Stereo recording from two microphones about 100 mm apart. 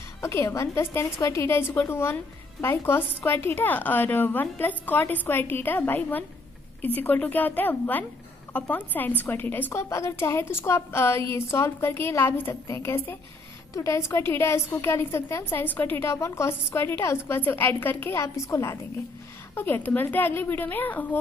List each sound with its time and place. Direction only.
0.2 s a woman's voice: 30° left (ahead or behind)
19.5 s a woman's voice: 20° left (ahead or behind)